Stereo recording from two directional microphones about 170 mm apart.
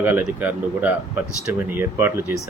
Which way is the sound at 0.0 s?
10° right (ahead or behind).